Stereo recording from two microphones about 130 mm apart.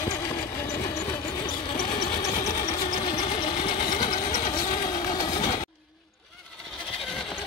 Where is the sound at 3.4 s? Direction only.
90° left.